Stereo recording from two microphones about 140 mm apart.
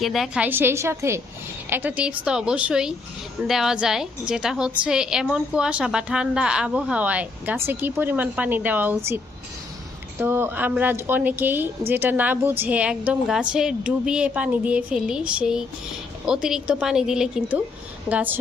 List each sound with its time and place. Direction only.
0.0 s speech: centre (ahead or behind)
0.4 s a woman's voice: 15° right (ahead or behind)